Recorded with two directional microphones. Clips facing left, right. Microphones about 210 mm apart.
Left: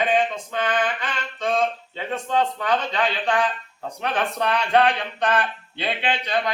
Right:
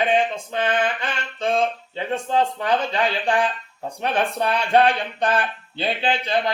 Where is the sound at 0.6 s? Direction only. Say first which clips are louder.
Right 2 dB; 25° right (ahead or behind).